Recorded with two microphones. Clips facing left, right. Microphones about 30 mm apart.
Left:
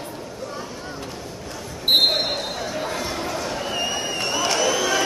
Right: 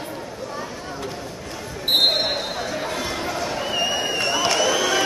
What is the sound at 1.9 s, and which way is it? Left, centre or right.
Basketball bounce, centre.